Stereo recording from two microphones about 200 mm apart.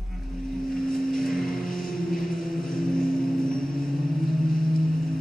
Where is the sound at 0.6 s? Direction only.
45° left (ahead or behind).